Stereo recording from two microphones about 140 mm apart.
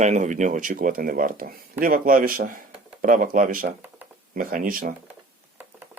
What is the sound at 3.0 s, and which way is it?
A man's voice, 70° right (ahead or behind).